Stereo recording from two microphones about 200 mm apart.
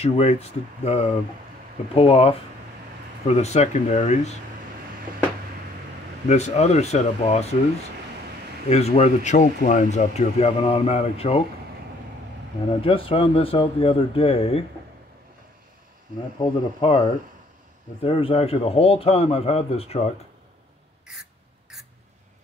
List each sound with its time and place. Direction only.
0.0 s speech: 30° left (ahead or behind)
6.2 s speech: 35° left (ahead or behind)
8.6 s speech: 30° left (ahead or behind)
12.8 s speech: 25° left (ahead or behind)
16.3 s speech: 25° left (ahead or behind)
21.1 s a sound: centre (ahead or behind)